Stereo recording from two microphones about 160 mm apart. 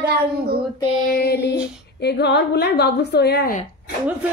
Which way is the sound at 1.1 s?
80° left.